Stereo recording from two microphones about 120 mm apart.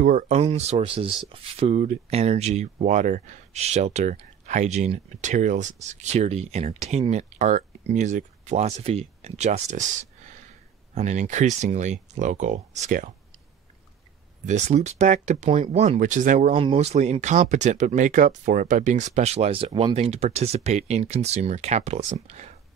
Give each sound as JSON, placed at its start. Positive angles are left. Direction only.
{"t": 0.0, "sound": "speech", "side_deg": -90}
{"t": 1.8, "sound": "speech", "side_deg": -65}
{"t": 11.0, "sound": "speech", "side_deg": -80}
{"t": 14.4, "sound": "speech", "side_deg": -75}
{"t": 16.7, "sound": "speech", "side_deg": -70}